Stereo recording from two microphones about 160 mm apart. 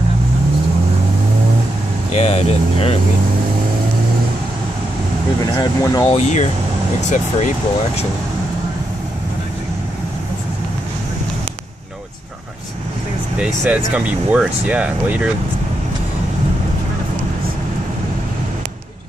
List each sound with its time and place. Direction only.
2.1 s speech: 40° left (ahead or behind)
5.6 s speech: 25° left (ahead or behind)
6.0 s speech: 45° left (ahead or behind)
13.4 s speech: 5° right (ahead or behind)